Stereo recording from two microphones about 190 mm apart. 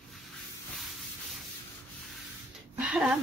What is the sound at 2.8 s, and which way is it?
Speech, 5° right (ahead or behind).